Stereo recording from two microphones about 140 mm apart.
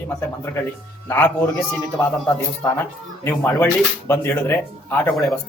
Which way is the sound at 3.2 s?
20° left (ahead or behind).